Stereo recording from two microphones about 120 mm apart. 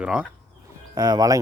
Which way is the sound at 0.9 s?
35° right (ahead or behind).